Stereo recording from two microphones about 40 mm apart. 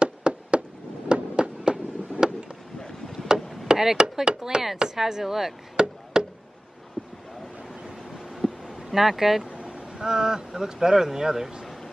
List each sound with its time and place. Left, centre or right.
0.0 s fireworks: right
3.3 s chop: centre
3.6 s chopping: centre
4.7 s speech: centre
5.8 s chop: centre
6.1 s a sound: centre
7.0 s a sound: centre
8.2 s vehicle: centre
9.5 s speech: right